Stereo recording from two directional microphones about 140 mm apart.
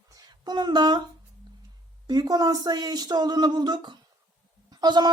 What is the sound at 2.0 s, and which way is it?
Speech, 30° right (ahead or behind).